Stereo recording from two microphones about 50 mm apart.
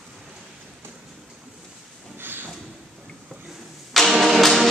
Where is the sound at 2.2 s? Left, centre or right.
Right.